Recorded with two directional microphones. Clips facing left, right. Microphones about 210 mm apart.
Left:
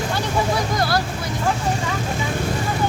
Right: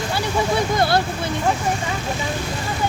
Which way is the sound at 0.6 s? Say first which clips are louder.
Right 3 dB; 25° right (ahead or behind).